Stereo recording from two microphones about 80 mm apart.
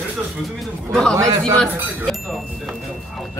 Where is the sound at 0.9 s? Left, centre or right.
Centre.